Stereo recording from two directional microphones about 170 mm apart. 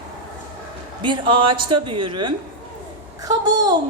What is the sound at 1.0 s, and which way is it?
A man's voice, 30° right (ahead or behind).